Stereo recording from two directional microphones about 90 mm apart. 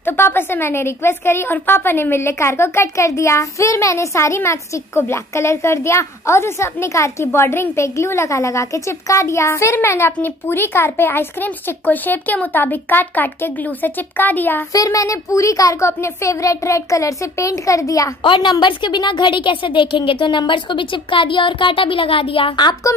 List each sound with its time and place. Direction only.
0.0 s a woman's voice: 25° left (ahead or behind)
14.7 s a woman's voice: 40° left (ahead or behind)
18.2 s a woman's voice: 60° left (ahead or behind); by 22.5 s 85° left